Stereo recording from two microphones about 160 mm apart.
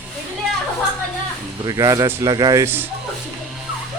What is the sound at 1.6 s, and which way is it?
A man's voice, 20° right (ahead or behind).